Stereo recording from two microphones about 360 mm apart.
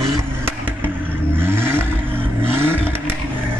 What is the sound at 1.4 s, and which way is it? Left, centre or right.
Vehicle, centre.